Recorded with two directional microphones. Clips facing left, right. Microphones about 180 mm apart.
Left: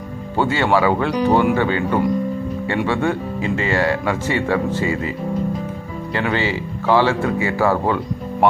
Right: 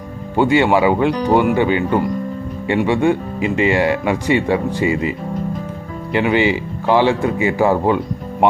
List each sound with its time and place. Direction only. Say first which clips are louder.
0.3 s speech: right 4 dB; 15° right (ahead or behind)
6.1 s speech: right 6 dB; 15° right (ahead or behind)